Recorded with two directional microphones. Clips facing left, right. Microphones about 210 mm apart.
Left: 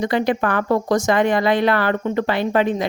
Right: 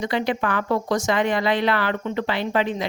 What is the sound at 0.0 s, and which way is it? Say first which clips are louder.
Speech: left 4 dB; 50° left (ahead or behind).